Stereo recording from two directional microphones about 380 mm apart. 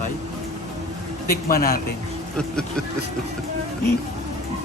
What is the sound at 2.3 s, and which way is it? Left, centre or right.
Speech, centre.